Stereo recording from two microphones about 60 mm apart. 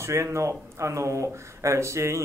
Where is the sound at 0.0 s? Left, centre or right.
Right.